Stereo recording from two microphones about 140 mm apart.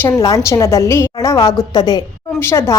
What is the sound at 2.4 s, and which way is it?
Speech, 20° left (ahead or behind).